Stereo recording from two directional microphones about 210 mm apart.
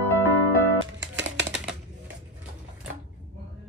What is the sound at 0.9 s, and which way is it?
Music, 60° right (ahead or behind).